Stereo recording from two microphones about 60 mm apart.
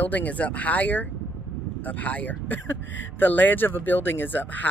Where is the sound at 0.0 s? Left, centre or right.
Left.